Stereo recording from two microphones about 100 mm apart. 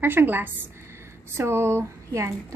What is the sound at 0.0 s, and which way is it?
A woman's voice, 20° right (ahead or behind).